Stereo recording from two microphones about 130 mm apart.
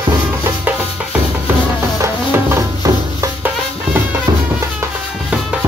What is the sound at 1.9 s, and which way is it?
Music, 20° right (ahead or behind).